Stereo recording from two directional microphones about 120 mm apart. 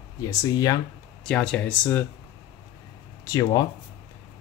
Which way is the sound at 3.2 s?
30° left (ahead or behind).